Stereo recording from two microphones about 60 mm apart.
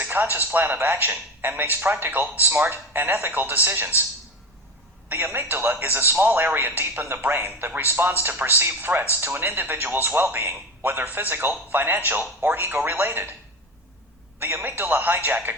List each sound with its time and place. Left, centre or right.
0.0 s speech: right
5.0 s speech: right
14.3 s speech: right